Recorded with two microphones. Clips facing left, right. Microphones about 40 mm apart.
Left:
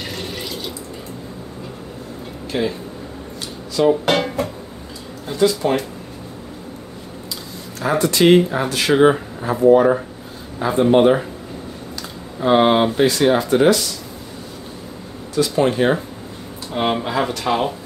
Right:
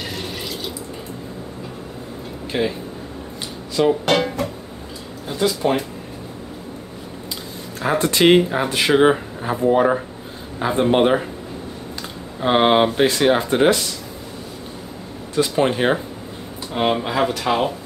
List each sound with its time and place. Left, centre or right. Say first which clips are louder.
0.1 s drip: left 1 dB; centre
2.5 s speech: even; centre
4.0 s speech: even; centre
7.8 s speech: left 1 dB; right
8.4 s speech: even; centre
12.4 s speech: left 1 dB; right
15.3 s speech: left 1 dB; right
16.7 s speech: even; centre